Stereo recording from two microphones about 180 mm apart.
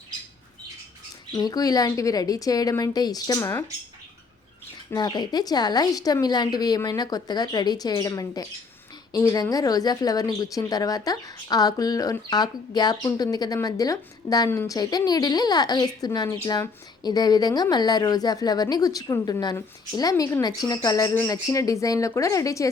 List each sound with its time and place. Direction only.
1.3 s speech: 20° left (ahead or behind)
4.9 s speech: 25° left (ahead or behind)